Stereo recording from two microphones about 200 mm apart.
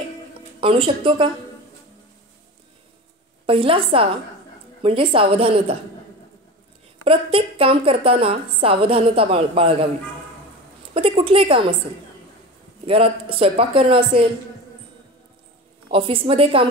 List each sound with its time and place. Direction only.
0.6 s a woman's voice: 25° right (ahead or behind)
3.4 s a woman's voice: 25° right (ahead or behind)
7.1 s a woman's voice: 30° right (ahead or behind)
11.0 s a woman's voice: 25° right (ahead or behind)
12.8 s a woman's voice: 30° right (ahead or behind)
15.9 s a woman's voice: 25° right (ahead or behind)